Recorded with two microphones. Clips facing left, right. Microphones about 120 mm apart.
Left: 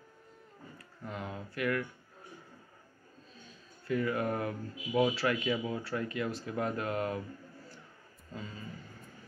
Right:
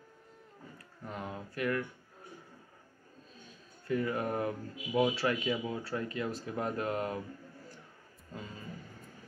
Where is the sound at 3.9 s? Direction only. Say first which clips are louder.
Left 1 dB; 30° right (ahead or behind).